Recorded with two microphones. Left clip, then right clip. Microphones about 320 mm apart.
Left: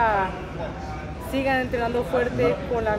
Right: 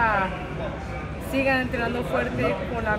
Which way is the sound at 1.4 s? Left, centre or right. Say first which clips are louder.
Even; centre.